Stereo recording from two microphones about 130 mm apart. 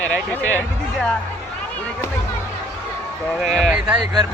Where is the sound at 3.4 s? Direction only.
Centre (ahead or behind).